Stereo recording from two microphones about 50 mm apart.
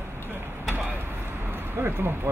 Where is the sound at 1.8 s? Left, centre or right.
Right.